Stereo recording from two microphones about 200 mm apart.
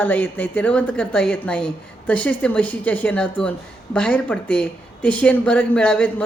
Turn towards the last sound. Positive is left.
turn(degrees=5)  # may be behind; listen again after turning